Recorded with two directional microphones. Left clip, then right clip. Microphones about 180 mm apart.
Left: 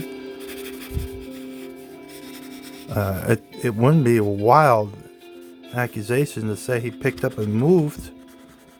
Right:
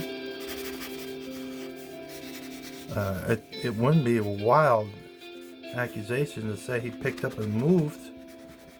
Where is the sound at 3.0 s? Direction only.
60° left (ahead or behind).